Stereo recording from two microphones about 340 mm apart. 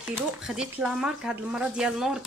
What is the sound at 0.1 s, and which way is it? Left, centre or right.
Speech, centre.